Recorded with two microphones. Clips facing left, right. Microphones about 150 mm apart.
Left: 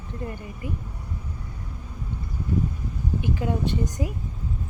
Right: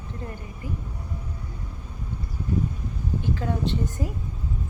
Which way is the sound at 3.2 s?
15° left (ahead or behind).